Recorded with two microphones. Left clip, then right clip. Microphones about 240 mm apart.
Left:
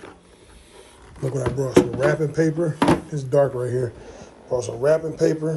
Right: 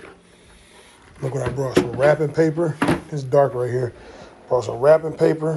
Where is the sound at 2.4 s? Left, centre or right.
Centre.